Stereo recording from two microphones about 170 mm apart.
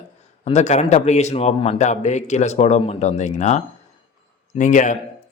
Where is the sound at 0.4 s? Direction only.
40° left (ahead or behind).